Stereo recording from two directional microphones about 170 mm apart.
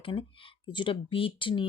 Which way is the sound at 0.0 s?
30° left (ahead or behind).